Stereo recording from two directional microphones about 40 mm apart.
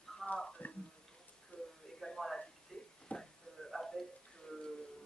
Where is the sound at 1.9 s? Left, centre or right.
Centre.